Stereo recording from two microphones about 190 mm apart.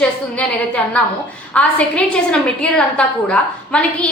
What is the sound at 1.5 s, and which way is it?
A woman's voice, 5° left (ahead or behind).